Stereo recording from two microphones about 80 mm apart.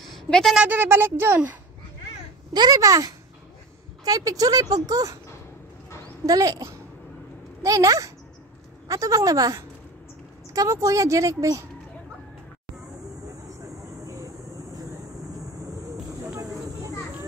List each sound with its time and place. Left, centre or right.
0.1 s a sound: centre
0.6 s speech: right
2.5 s speech: right
2.8 s speech: right
6.2 s speech: right
13.6 s vehicle: right
16.3 s a sound: right